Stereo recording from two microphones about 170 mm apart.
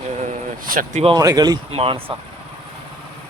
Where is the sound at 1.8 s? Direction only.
35° right (ahead or behind).